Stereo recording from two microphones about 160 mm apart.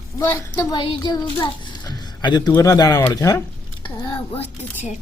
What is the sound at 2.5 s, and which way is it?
Speech, 20° left (ahead or behind).